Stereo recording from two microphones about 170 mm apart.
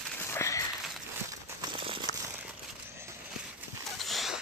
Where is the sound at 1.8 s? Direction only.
30° right (ahead or behind).